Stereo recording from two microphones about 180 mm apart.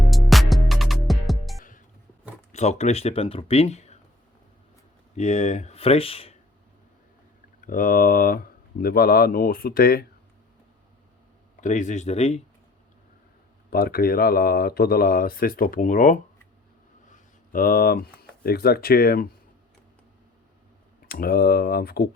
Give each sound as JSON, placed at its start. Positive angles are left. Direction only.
{"t": 0.0, "sound": "music", "side_deg": 0}
{"t": 2.5, "sound": "speech", "side_deg": 40}
{"t": 5.1, "sound": "speech", "side_deg": 40}
{"t": 7.6, "sound": "speech", "side_deg": 50}
{"t": 11.6, "sound": "speech", "side_deg": 40}
{"t": 13.7, "sound": "speech", "side_deg": 55}
{"t": 21.1, "sound": "speech", "side_deg": 55}